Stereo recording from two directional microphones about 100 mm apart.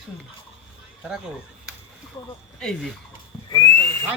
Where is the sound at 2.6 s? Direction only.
5° left (ahead or behind).